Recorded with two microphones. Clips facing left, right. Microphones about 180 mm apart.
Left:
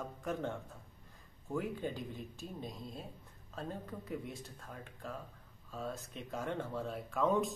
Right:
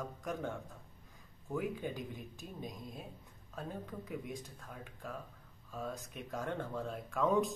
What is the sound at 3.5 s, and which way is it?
Speech, centre (ahead or behind).